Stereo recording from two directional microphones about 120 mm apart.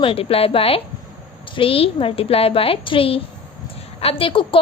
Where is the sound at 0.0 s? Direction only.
50° left (ahead or behind).